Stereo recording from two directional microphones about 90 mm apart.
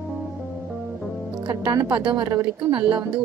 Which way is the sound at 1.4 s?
50° right (ahead or behind).